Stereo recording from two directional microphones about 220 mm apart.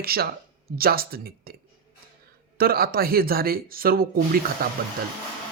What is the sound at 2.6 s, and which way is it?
Speech, 45° right (ahead or behind).